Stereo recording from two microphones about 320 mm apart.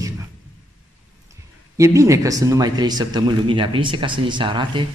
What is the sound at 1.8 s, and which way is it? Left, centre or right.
Speech, centre.